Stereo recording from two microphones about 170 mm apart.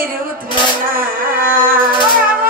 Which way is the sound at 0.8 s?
55° right (ahead or behind).